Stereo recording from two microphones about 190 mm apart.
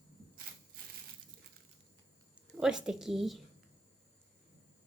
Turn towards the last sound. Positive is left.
turn(degrees=0)  # may be behind; listen again after turning